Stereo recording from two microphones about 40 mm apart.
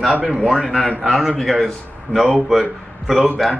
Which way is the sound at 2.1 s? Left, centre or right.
Right.